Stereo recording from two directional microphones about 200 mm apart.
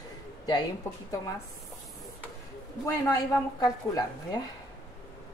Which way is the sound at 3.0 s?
20° left (ahead or behind).